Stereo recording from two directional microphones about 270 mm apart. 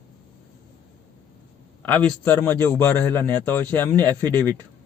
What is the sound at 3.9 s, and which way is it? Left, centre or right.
Speech, centre.